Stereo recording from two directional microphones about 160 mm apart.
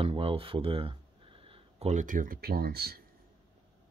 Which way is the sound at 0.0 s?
35° right (ahead or behind).